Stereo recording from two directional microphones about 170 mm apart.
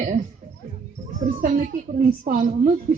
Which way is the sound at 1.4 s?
55° right (ahead or behind).